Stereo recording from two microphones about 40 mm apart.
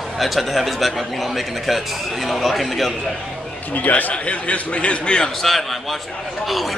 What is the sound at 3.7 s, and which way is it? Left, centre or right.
A man's voice, left.